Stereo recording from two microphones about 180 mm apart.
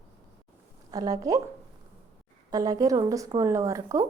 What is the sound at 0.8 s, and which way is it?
Speech, 20° right (ahead or behind).